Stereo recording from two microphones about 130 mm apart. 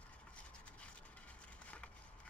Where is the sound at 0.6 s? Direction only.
10° left (ahead or behind).